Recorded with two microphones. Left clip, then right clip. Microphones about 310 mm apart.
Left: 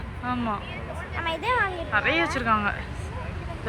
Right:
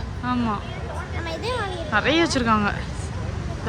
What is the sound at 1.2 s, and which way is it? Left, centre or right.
Music, left.